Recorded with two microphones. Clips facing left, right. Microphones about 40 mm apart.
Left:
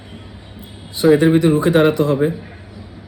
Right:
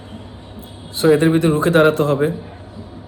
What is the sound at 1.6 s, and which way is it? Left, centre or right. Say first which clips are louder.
Speech: even; right.